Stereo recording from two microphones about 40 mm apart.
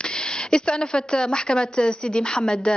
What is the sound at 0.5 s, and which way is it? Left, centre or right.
Speech, left.